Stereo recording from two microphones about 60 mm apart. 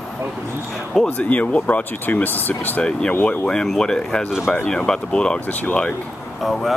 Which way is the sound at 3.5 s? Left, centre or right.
Centre.